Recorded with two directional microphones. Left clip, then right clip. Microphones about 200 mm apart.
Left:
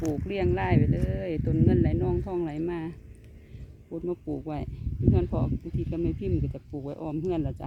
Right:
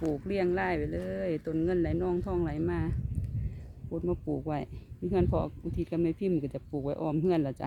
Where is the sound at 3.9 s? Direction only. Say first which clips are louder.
Even; 5° right (ahead or behind).